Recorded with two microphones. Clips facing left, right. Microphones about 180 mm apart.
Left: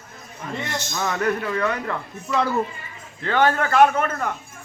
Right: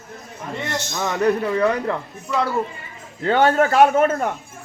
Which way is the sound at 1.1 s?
20° right (ahead or behind).